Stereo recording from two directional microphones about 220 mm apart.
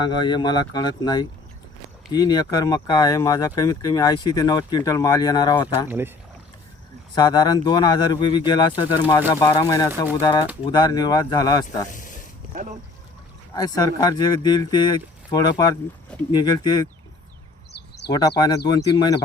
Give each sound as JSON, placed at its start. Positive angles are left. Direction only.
{"t": 0.0, "sound": "speech", "side_deg": 20}
{"t": 5.9, "sound": "speech", "side_deg": -10}
{"t": 7.2, "sound": "speech", "side_deg": 20}
{"t": 11.9, "sound": "speech", "side_deg": 35}
{"t": 13.6, "sound": "speech", "side_deg": 15}
{"t": 18.1, "sound": "speech", "side_deg": 20}